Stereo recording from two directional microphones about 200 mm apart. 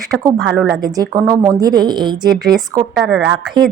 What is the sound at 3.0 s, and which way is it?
Speech, centre (ahead or behind).